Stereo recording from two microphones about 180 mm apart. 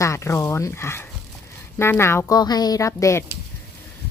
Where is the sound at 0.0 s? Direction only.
15° left (ahead or behind).